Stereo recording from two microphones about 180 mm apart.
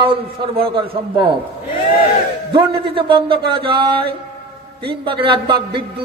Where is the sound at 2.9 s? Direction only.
30° right (ahead or behind).